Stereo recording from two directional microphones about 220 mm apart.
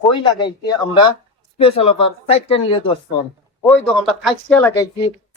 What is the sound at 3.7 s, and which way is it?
Speech, 5° left (ahead or behind).